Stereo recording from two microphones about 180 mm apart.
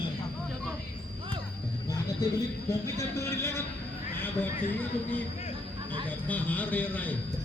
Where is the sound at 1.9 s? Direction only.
20° left (ahead or behind).